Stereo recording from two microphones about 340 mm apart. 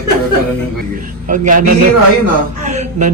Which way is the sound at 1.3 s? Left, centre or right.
Right.